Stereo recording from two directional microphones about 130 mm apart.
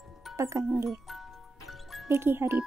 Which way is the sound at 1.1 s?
Centre (ahead or behind).